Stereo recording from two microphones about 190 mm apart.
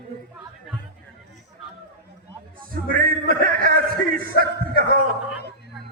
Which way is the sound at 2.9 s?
50° right (ahead or behind).